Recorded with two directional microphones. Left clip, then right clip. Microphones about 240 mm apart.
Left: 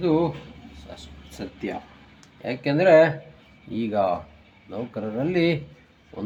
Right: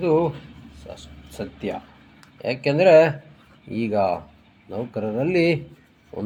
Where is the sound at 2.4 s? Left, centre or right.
Right.